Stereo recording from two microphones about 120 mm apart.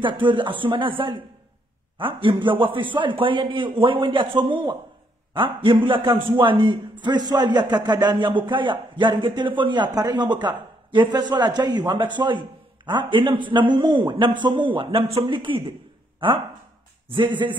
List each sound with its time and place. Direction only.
0.0 s a man's voice: 45° right (ahead or behind)
17.1 s a man's voice: 40° right (ahead or behind)